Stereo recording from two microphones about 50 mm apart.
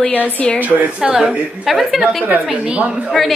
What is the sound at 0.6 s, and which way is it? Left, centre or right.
Speech, right.